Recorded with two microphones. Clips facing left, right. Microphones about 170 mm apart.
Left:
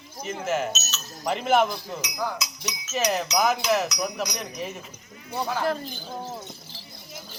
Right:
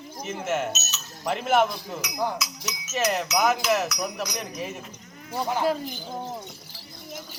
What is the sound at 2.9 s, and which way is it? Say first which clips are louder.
Speech: even; centre (ahead or behind).